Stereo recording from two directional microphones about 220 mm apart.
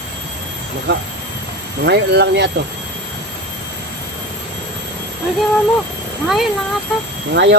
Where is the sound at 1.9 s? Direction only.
50° right (ahead or behind).